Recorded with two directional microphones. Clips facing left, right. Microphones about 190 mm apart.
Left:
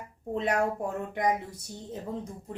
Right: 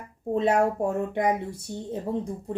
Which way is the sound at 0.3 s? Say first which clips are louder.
Right 5 dB; 25° right (ahead or behind).